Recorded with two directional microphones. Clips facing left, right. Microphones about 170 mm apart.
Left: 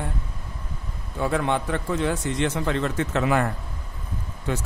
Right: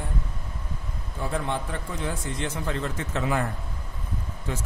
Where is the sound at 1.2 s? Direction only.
70° left (ahead or behind).